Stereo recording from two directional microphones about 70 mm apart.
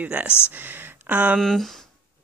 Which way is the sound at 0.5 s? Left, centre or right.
Right.